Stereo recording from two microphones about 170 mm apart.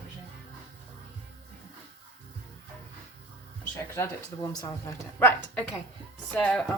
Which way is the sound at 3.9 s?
15° left (ahead or behind).